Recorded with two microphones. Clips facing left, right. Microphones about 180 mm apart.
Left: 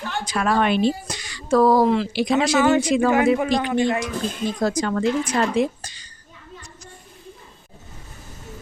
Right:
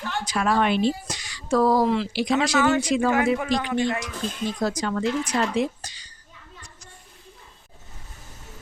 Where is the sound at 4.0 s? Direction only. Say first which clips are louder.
Left 4 dB; 50° left (ahead or behind).